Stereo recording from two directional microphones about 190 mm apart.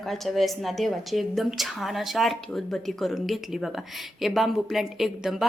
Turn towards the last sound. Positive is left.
turn(degrees=0)  # may be behind; listen again after turning